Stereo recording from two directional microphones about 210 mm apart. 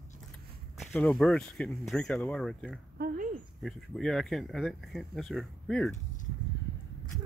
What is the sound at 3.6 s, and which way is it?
Speech, centre (ahead or behind).